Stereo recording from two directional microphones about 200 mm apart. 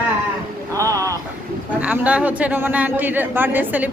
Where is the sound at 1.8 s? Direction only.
5° right (ahead or behind).